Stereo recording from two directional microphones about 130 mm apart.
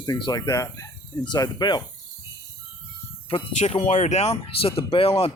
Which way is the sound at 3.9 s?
65° left (ahead or behind).